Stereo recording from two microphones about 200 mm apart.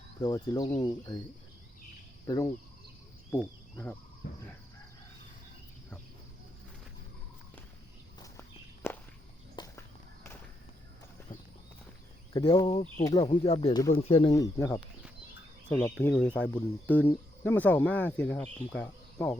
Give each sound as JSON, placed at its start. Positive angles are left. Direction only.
{"t": 0.2, "sound": "speech", "side_deg": 20}
{"t": 2.2, "sound": "cricket", "side_deg": 20}
{"t": 3.3, "sound": "speech", "side_deg": 10}
{"t": 8.2, "sound": "walk", "side_deg": 10}
{"t": 9.6, "sound": "a sound", "side_deg": 20}
{"t": 11.3, "sound": "clip-clop", "side_deg": 40}
{"t": 12.3, "sound": "speech", "side_deg": 20}
{"t": 14.3, "sound": "speech", "side_deg": 15}